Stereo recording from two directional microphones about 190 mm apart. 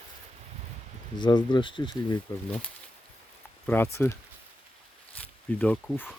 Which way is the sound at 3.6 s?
10° left (ahead or behind).